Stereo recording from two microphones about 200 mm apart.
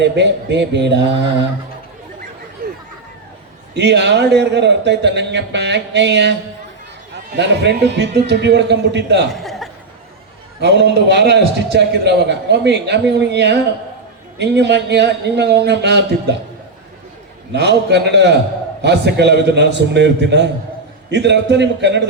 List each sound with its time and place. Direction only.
0.0 s a man's voice: 60° right (ahead or behind)
3.8 s a man's voice: 60° right (ahead or behind)
7.3 s a man's voice: 60° right (ahead or behind)
9.3 s chuckle: centre (ahead or behind)
10.6 s a man's voice: 60° right (ahead or behind)
17.5 s a man's voice: 60° right (ahead or behind)